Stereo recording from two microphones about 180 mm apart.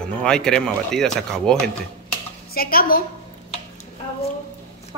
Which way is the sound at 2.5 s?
55° left (ahead or behind).